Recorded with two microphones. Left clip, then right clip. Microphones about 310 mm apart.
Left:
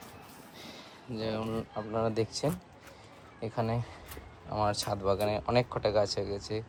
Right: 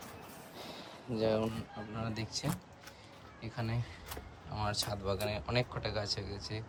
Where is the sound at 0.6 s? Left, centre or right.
Centre.